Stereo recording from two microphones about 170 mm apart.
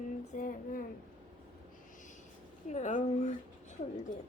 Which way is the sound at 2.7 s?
45° left (ahead or behind).